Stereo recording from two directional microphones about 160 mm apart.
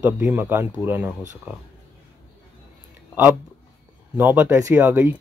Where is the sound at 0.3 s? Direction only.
15° right (ahead or behind).